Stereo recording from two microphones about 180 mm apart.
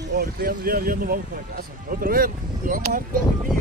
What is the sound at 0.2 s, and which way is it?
Speech, 50° right (ahead or behind).